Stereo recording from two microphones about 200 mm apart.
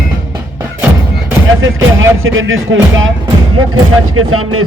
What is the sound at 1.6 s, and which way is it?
Speech, 80° right.